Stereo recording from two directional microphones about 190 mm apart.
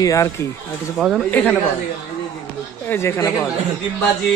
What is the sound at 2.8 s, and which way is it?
Speech, 15° left (ahead or behind).